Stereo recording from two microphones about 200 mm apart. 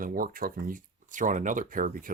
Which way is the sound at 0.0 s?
45° right (ahead or behind).